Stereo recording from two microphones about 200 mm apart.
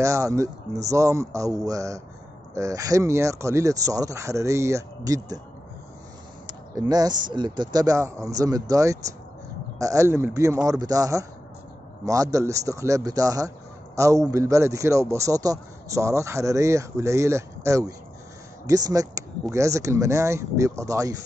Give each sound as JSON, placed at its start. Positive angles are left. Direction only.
{"t": 0.0, "sound": "a man's voice", "side_deg": -15}
{"t": 6.4, "sound": "a man's voice", "side_deg": -20}